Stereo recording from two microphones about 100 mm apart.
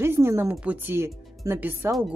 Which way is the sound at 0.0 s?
25° right (ahead or behind).